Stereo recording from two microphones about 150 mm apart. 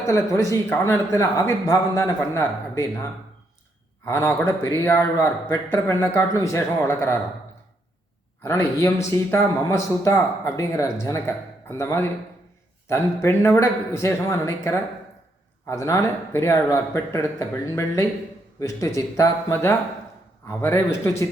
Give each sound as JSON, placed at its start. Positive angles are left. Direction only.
{"t": 0.0, "sound": "speech", "side_deg": 20}
{"t": 4.0, "sound": "speech", "side_deg": 15}
{"t": 8.4, "sound": "speech", "side_deg": 20}